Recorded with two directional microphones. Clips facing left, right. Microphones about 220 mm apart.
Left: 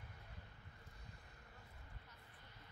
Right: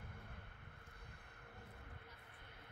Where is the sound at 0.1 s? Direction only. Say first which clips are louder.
Right 3 dB; 55° right (ahead or behind).